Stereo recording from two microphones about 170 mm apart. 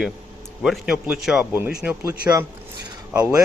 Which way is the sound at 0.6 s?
5° right (ahead or behind).